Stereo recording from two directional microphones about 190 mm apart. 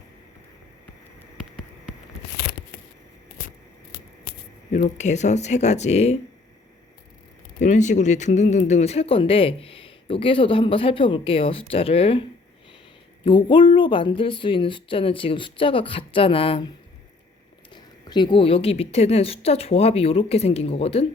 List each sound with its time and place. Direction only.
2.3 s a sound: 60° left (ahead or behind)
3.9 s scissors: 45° left (ahead or behind)
4.7 s a woman's voice: 40° left (ahead or behind)
7.6 s speech: 40° left (ahead or behind)
13.2 s speech: 25° left (ahead or behind)
17.7 s a woman's voice: 25° left (ahead or behind)